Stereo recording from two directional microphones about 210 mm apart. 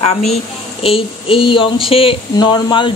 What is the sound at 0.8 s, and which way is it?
A woman's voice, 25° left (ahead or behind).